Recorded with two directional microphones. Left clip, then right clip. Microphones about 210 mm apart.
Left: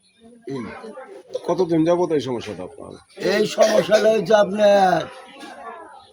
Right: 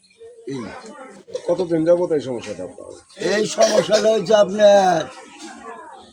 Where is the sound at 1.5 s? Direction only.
55° left (ahead or behind).